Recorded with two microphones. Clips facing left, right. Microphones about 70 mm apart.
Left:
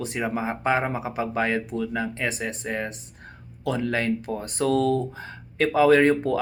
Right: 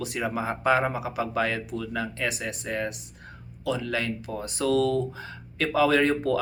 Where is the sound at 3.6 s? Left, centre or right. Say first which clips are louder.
Left 3 dB; left.